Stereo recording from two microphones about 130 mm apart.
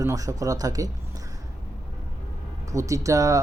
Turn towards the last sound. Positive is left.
turn(degrees=-25)  # may be behind; listen again after turning